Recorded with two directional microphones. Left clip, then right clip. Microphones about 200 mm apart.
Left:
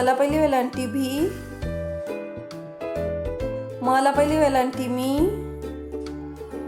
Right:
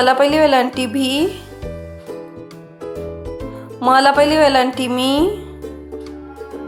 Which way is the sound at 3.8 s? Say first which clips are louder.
Right 8 dB; 5° right (ahead or behind).